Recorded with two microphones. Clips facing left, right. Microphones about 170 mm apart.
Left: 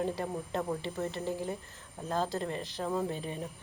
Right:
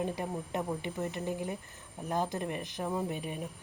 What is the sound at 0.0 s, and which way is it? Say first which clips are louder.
Speech: left 1 dB; 15° right (ahead or behind).